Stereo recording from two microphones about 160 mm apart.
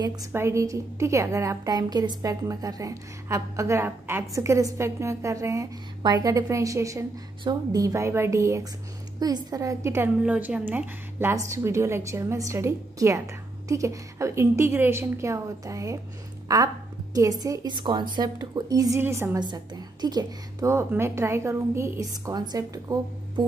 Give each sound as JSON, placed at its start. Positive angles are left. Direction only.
{"t": 0.0, "sound": "a woman's voice", "side_deg": -25}
{"t": 19.4, "sound": "a woman's voice", "side_deg": -25}